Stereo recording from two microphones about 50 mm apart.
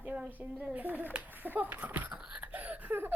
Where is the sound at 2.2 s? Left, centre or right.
Centre.